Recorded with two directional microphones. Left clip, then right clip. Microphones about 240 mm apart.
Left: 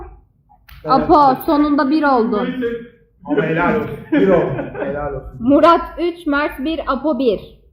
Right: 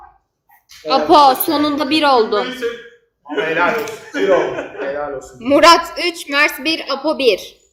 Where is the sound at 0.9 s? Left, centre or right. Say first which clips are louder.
Right 1 dB; right.